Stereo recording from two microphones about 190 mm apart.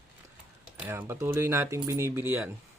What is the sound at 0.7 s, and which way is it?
Speech, 10° right (ahead or behind).